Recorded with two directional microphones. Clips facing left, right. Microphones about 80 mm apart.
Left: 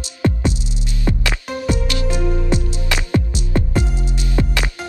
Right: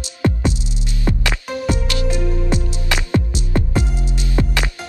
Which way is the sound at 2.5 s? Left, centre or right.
Right.